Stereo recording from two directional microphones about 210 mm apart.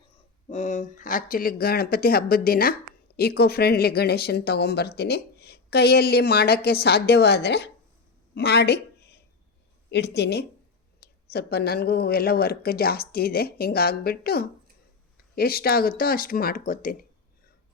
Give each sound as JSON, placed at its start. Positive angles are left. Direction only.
{"t": 0.4, "sound": "speech", "side_deg": 35}
{"t": 8.4, "sound": "a sound", "side_deg": 50}
{"t": 9.9, "sound": "speech", "side_deg": 50}